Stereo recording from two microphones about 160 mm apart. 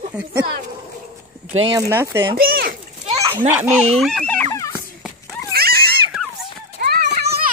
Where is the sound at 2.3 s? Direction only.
70° right (ahead or behind).